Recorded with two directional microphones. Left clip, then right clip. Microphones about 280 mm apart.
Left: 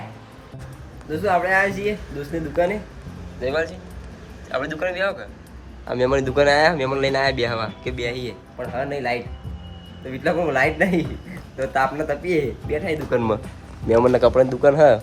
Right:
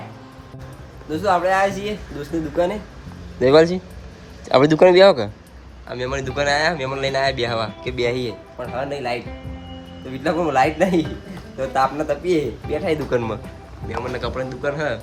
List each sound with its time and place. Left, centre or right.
1.1 s a man's voice: centre
3.4 s a man's voice: right
5.9 s speech: centre
8.0 s a man's voice: right
8.5 s a man's voice: centre
13.1 s speech: centre